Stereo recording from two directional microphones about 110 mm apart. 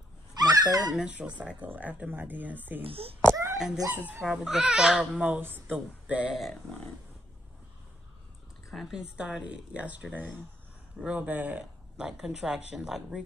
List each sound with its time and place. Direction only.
0.4 s a sound: 35° right (ahead or behind)
0.9 s speech: 10° right (ahead or behind)
2.8 s speech: 60° right (ahead or behind)
3.5 s speech: 5° right (ahead or behind)
3.9 s speech: 15° right (ahead or behind)
4.2 s speech: 5° right (ahead or behind)
8.6 s speech: 5° right (ahead or behind)